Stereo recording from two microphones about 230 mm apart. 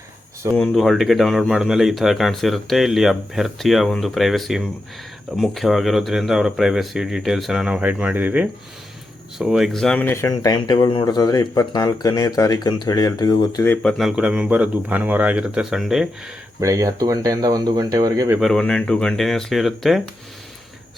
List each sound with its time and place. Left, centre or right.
0.5 s speech: centre
13.8 s speech: centre
16.6 s speech: centre
18.3 s speech: centre